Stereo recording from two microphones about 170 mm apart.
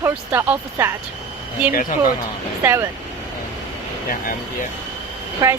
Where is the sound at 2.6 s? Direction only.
15° right (ahead or behind).